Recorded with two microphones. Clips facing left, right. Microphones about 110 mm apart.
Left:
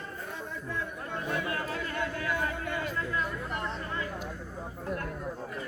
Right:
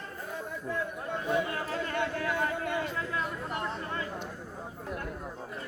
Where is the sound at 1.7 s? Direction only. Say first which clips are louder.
Right 2 dB; 30° right (ahead or behind).